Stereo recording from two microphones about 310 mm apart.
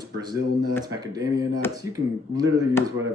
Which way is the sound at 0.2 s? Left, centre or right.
Centre.